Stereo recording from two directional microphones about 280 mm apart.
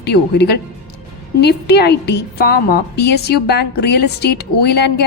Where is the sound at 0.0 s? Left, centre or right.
Left.